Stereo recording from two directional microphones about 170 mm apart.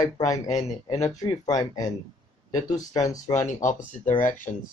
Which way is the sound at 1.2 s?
25° left (ahead or behind).